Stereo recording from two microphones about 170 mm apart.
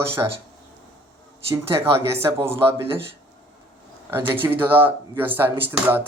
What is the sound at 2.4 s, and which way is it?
Speech, 15° right (ahead or behind).